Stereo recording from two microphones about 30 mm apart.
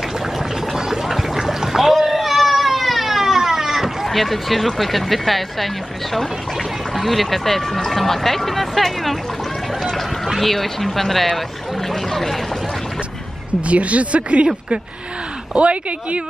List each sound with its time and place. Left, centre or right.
1.0 s a sound: centre
4.1 s speech: centre
7.0 s speech: centre
10.4 s speech: centre
11.9 s a sound: centre
13.7 s speech: right
15.5 s speech: right